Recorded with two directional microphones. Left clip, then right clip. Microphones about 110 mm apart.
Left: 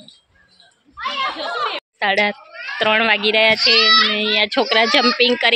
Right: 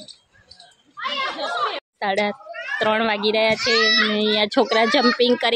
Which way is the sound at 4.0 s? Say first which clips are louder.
Left 3 dB; 35° right (ahead or behind).